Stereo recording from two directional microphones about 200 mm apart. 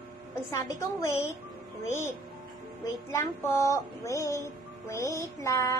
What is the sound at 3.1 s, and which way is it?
A woman's voice, 10° left (ahead or behind).